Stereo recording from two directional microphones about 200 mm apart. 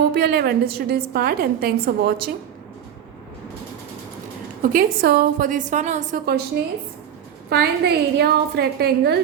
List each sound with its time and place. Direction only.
0.1 s a woman's voice: 50° right (ahead or behind)
4.6 s a woman's voice: 45° right (ahead or behind)
7.5 s a woman's voice: 55° right (ahead or behind)